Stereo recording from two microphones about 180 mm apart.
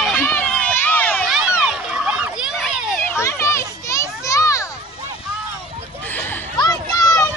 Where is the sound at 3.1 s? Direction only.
15° left (ahead or behind).